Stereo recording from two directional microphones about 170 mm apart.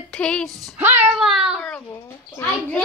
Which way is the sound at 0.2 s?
5° left (ahead or behind).